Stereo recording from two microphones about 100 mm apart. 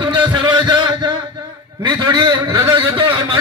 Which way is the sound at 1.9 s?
50° right (ahead or behind).